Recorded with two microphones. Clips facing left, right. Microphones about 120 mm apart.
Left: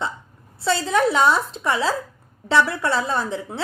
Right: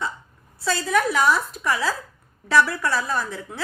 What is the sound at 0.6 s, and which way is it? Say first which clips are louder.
A woman's voice: left 3 dB; 25° left (ahead or behind).